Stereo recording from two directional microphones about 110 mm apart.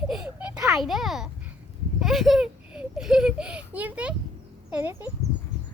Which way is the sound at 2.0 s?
Centre (ahead or behind).